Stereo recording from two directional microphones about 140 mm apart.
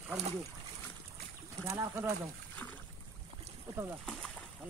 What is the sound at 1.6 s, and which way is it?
Speech, 15° right (ahead or behind).